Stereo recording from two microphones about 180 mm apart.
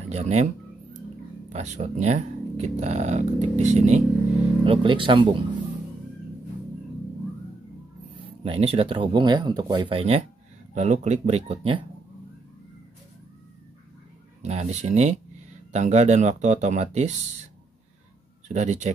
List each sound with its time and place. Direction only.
0.1 s speech: 40° right (ahead or behind)
1.5 s speech: 40° right (ahead or behind)
4.6 s speech: 30° right (ahead or behind)
8.2 s speech: 30° right (ahead or behind)
14.4 s speech: 40° right (ahead or behind)
18.5 s speech: 40° right (ahead or behind)